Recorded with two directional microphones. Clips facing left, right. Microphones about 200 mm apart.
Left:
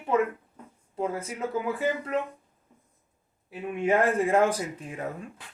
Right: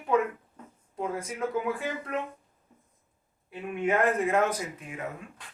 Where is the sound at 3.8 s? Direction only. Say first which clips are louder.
Left 2 dB; 30° left (ahead or behind).